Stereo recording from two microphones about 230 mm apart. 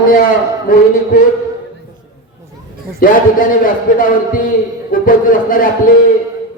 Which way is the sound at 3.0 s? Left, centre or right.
Left.